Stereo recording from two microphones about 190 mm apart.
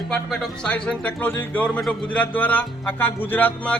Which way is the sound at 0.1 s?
Centre (ahead or behind).